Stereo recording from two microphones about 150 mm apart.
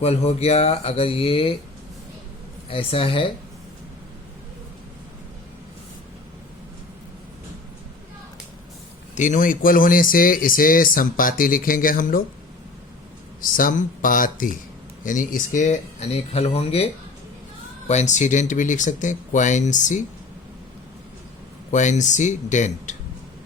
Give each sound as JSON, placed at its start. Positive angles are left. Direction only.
{"t": 0.0, "sound": "speech", "side_deg": 45}
{"t": 2.6, "sound": "speech", "side_deg": 40}
{"t": 9.1, "sound": "speech", "side_deg": 55}
{"t": 13.4, "sound": "speech", "side_deg": 70}
{"t": 21.7, "sound": "speech", "side_deg": 55}